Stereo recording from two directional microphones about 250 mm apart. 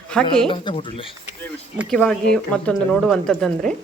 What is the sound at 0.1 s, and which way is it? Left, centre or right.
Speech, centre.